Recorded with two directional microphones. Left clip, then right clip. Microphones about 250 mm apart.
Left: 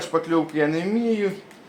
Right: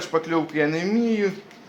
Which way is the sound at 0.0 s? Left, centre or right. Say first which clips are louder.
Left 1 dB; centre.